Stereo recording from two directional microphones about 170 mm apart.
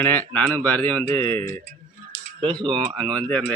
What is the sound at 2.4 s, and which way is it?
Speech, 30° right (ahead or behind).